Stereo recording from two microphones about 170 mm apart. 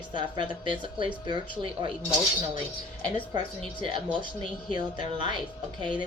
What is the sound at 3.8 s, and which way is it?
A woman's voice, 30° right (ahead or behind).